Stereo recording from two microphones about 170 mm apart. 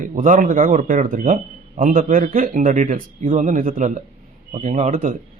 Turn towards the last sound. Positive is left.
turn(degrees=-50)  # may be behind; listen again after turning